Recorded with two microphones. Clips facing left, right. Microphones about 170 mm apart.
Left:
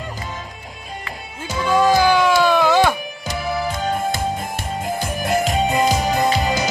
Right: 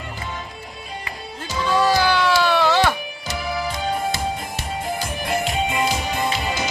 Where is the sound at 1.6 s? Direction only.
15° left (ahead or behind).